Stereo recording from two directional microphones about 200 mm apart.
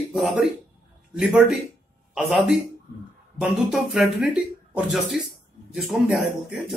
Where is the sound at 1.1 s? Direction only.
5° right (ahead or behind).